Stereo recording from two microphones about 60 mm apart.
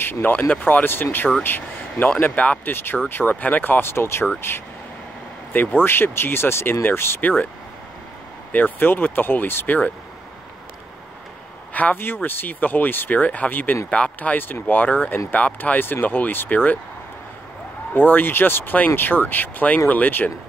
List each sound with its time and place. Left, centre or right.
0.0 s speech: left
2.7 s speech: left
3.8 s speech: left
5.5 s speech: left
7.2 s speech: left
8.5 s speech: left
11.7 s speech: left
17.9 s speech: left